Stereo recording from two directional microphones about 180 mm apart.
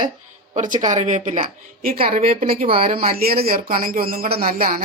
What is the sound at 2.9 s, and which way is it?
Speech, 55° right (ahead or behind).